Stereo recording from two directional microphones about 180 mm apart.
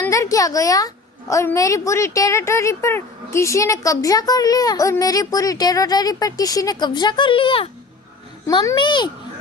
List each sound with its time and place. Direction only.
0.0 s a woman's voice: 15° left (ahead or behind)